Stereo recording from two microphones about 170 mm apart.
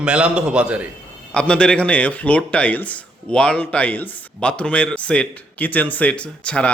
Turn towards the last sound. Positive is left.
turn(degrees=5)  # may be behind; listen again after turning